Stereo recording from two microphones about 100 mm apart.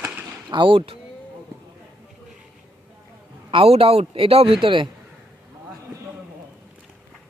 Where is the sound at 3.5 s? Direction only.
70° right (ahead or behind).